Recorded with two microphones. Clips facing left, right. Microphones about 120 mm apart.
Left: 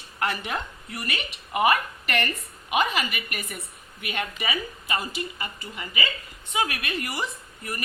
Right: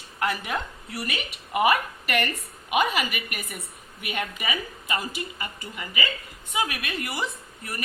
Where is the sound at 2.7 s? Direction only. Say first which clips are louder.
Right 1 dB; 10° right (ahead or behind).